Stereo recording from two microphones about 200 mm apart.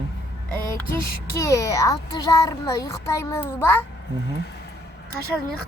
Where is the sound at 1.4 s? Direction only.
15° left (ahead or behind).